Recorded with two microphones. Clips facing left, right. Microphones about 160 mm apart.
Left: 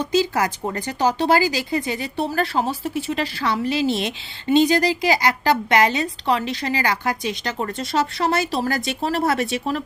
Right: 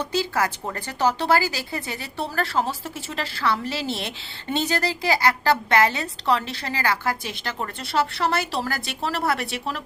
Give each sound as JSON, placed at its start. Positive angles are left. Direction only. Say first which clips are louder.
{"t": 0.1, "sound": "speech", "louder": "left 5 dB", "side_deg": 15}